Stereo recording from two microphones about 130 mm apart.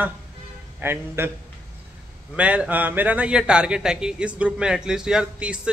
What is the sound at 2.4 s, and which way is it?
A man's voice, 10° right (ahead or behind).